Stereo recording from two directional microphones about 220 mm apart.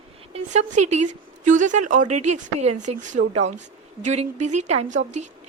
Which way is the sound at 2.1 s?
90° right.